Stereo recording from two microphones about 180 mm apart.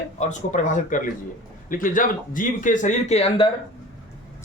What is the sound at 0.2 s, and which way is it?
Speech, 40° left (ahead or behind).